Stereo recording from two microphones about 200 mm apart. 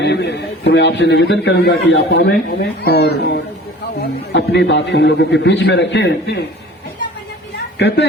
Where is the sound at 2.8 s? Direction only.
55° left (ahead or behind).